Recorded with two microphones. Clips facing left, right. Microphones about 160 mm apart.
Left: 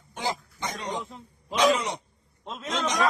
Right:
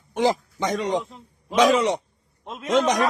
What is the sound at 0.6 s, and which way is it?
Speech, 80° right.